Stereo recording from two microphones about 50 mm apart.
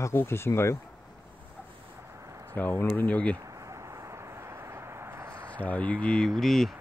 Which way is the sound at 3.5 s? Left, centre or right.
Right.